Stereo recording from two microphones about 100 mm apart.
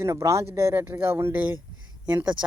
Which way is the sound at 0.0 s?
30° right (ahead or behind).